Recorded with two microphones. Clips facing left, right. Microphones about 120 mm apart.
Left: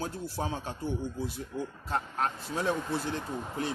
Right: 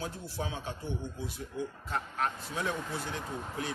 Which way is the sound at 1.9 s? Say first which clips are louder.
Left 3 dB; 35° left (ahead or behind).